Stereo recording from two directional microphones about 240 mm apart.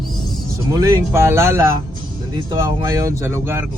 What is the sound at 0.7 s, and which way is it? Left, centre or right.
Speech, centre.